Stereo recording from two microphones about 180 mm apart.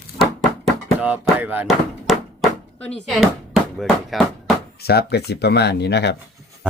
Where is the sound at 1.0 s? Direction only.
10° right (ahead or behind).